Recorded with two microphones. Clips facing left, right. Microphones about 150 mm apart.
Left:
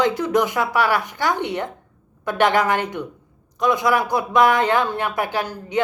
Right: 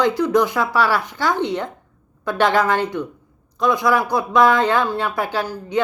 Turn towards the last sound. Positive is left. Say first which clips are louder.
# right 1 dB
turn(degrees=20)  # may be behind; listen again after turning